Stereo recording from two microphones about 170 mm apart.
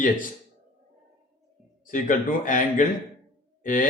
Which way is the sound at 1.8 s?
50° left (ahead or behind).